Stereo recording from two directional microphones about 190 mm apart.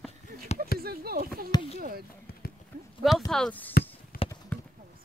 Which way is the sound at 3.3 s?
5° left (ahead or behind).